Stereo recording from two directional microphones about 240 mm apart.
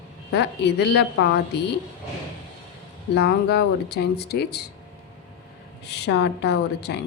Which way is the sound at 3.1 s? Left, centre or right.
Left.